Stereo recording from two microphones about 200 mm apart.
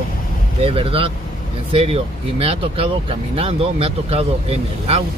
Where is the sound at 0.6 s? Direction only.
25° right (ahead or behind).